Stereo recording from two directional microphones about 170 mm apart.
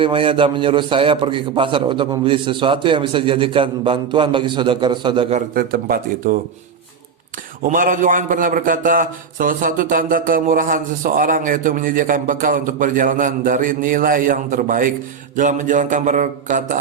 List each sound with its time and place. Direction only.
0.0 s a man's voice: 30° right (ahead or behind)
5.5 s speech: 60° right (ahead or behind)
7.6 s a man's voice: 50° right (ahead or behind)